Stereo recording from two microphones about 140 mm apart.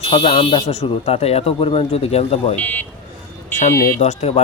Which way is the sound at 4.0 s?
55° left (ahead or behind).